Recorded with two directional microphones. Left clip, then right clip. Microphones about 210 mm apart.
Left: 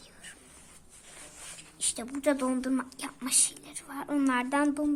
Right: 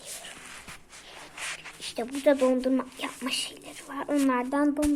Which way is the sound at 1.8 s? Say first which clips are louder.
Right 5 dB; 30° left (ahead or behind).